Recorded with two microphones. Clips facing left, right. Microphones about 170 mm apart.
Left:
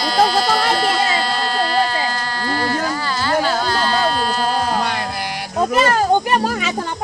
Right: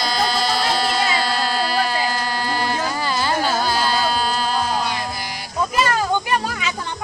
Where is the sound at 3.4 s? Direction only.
10° right (ahead or behind).